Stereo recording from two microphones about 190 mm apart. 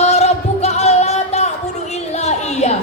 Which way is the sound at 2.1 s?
35° left (ahead or behind).